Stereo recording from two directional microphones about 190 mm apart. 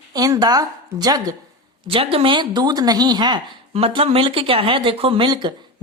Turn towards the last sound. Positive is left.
turn(degrees=-25)  # may be behind; listen again after turning